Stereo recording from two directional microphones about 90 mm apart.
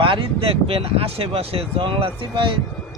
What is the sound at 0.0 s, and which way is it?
Speech, 80° right.